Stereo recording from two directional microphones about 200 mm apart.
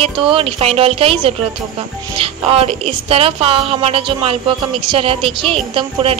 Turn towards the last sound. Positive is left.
turn(degrees=-25)  # may be behind; listen again after turning